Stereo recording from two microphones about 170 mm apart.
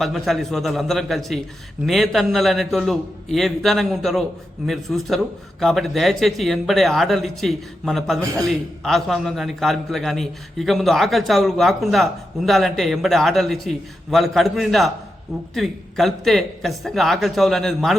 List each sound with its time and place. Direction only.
0.0 s a man's voice: centre (ahead or behind)